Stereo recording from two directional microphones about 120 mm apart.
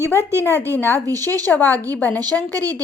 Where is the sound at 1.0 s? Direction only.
30° right (ahead or behind).